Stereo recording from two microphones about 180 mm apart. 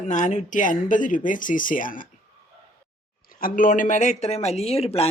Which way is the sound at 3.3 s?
50° left (ahead or behind).